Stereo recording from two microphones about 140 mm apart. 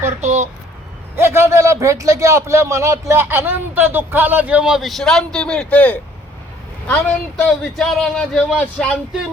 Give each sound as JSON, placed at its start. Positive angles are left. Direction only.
{"t": 0.2, "sound": "speech", "side_deg": -55}
{"t": 1.1, "sound": "a man's voice", "side_deg": -15}